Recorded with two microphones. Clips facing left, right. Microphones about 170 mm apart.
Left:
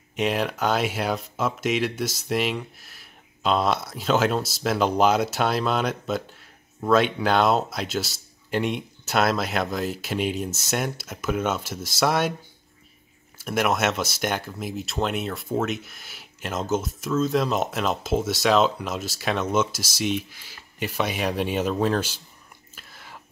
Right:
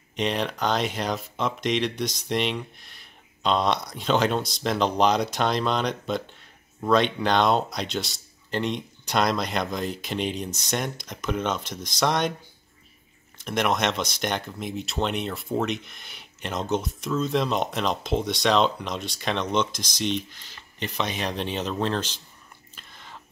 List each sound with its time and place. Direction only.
0.1 s speech: 5° left (ahead or behind)
13.4 s speech: 5° left (ahead or behind)
22.8 s whispering: 5° left (ahead or behind)